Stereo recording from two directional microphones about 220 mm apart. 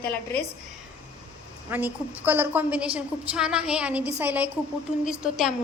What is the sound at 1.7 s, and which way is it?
A woman's voice, 10° right (ahead or behind).